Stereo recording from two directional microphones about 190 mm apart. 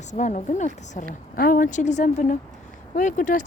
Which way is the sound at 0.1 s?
35° left (ahead or behind).